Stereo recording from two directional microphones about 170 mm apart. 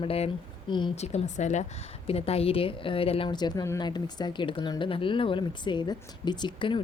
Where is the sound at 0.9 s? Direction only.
40° left (ahead or behind).